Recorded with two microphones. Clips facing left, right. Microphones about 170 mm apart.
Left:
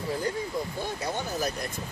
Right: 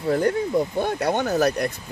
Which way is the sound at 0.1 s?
65° right (ahead or behind).